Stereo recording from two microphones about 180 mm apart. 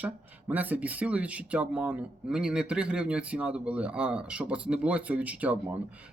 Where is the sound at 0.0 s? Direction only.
10° right (ahead or behind).